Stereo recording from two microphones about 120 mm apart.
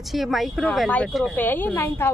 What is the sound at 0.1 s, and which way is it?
Speech, centre (ahead or behind).